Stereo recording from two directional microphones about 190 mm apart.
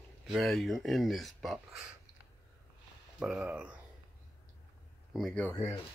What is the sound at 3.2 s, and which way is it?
Speech, 5° right (ahead or behind).